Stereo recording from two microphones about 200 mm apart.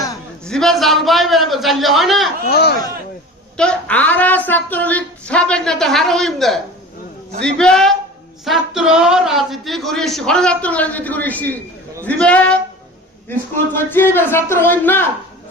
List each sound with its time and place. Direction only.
0.4 s a man's voice: 5° left (ahead or behind)
2.5 s speech: 50° left (ahead or behind)
3.6 s a man's voice: 5° left (ahead or behind)